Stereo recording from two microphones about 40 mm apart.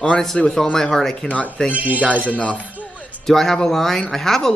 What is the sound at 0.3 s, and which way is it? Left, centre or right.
Speech, centre.